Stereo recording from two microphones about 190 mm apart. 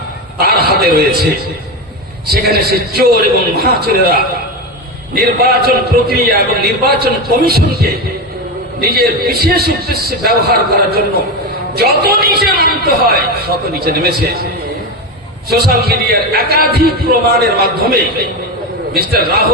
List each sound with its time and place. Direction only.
0.3 s a sound: 55° right (ahead or behind)
2.3 s a man's voice: 55° right (ahead or behind)
15.4 s a man's voice: 55° right (ahead or behind)